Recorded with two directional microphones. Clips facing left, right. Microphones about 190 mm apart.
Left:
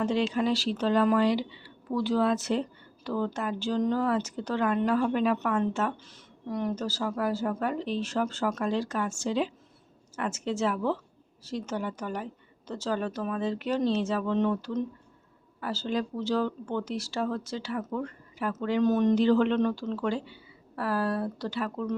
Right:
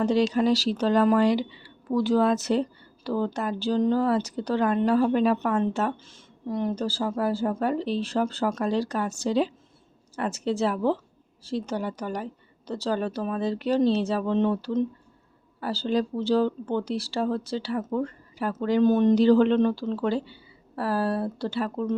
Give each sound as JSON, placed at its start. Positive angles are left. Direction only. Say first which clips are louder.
{"t": 0.0, "sound": "a woman's voice", "louder": "right 4 dB", "side_deg": -40}